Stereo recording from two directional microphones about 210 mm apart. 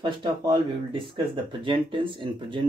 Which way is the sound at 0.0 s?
20° right (ahead or behind).